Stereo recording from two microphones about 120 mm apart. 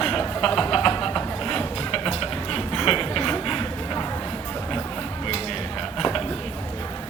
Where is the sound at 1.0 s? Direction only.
5° left (ahead or behind).